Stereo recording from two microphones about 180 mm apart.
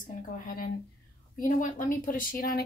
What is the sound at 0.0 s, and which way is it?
Speech, 50° left (ahead or behind).